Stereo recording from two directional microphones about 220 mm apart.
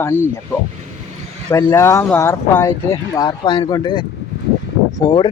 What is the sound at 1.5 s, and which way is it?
Speech, 10° left (ahead or behind).